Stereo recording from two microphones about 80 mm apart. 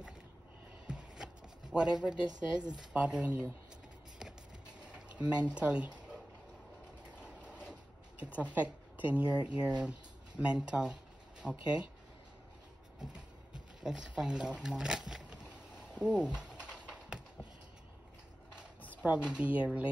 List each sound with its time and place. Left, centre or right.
0.8 s shuffling cards: centre
2.7 s speech: centre
4.8 s speech: centre
7.2 s vehicle: centre
8.2 s speech: centre
11.4 s speech: centre
13.0 s speech: centre
15.9 s a sound: centre
19.0 s speech: centre